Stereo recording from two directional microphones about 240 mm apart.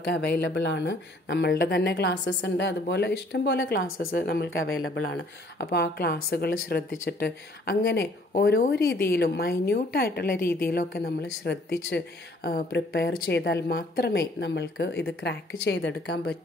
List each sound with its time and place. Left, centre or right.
0.1 s a woman's voice: left
4.5 s a woman's voice: left